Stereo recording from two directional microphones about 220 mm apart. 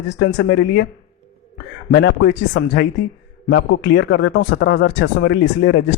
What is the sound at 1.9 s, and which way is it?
Speech, 50° left (ahead or behind).